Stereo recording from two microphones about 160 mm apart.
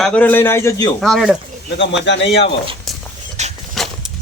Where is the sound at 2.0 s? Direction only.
90° left.